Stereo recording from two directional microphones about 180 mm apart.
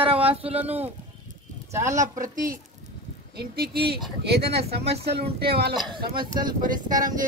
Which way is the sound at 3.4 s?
60° right (ahead or behind).